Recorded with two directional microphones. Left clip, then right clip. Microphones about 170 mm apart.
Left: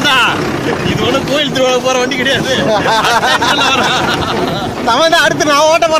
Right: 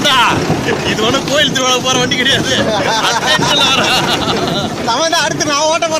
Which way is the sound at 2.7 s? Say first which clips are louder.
Left 3 dB; 60° left (ahead or behind).